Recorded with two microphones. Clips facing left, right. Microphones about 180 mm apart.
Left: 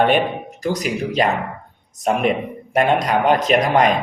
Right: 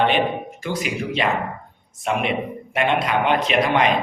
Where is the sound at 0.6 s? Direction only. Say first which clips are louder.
Left 5 dB; 40° left (ahead or behind).